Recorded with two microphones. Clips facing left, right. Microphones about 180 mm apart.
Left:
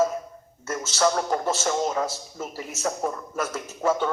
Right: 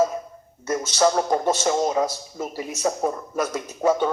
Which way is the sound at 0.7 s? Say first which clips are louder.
Right 3 dB; 15° right (ahead or behind).